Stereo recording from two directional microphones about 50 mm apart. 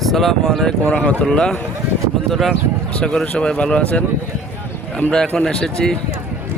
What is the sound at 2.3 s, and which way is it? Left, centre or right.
Speech, centre.